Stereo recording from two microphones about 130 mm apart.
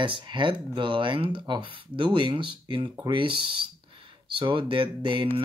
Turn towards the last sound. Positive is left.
turn(degrees=-40)  # may be behind; listen again after turning